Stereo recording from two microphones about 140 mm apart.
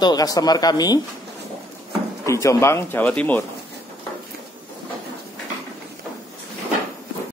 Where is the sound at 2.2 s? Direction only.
20° left (ahead or behind).